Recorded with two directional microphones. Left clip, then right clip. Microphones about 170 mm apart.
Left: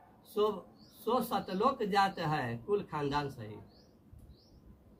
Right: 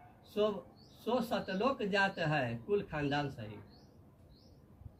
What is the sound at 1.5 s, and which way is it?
Speech, 15° left (ahead or behind).